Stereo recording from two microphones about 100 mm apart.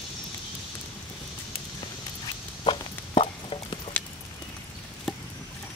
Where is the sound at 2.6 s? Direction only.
70° left (ahead or behind).